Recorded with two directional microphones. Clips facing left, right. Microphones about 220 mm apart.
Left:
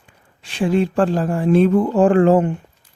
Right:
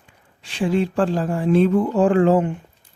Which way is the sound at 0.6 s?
50° left (ahead or behind).